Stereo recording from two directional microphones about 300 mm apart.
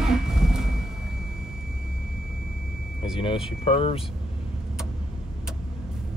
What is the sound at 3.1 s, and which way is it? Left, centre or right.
Speech, centre.